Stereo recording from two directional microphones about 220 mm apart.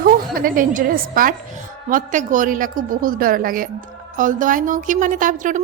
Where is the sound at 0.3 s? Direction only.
40° right (ahead or behind).